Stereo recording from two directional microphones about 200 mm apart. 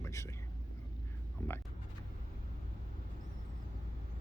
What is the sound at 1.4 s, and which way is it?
Speech, 10° left (ahead or behind).